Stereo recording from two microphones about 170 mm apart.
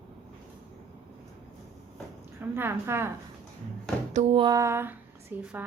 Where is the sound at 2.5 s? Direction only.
15° right (ahead or behind).